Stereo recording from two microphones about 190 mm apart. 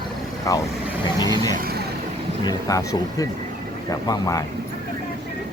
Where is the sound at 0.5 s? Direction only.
15° left (ahead or behind).